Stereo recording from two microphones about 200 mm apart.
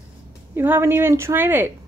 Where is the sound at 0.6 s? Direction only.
10° right (ahead or behind).